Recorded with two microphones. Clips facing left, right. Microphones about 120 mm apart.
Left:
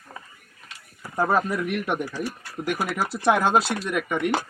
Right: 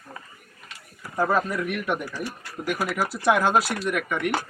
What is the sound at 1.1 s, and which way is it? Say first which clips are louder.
Speech: left 1 dB; 25° left (ahead or behind).